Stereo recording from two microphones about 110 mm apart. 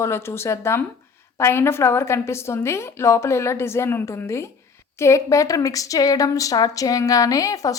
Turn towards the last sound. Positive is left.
turn(degrees=30)  # may be behind; listen again after turning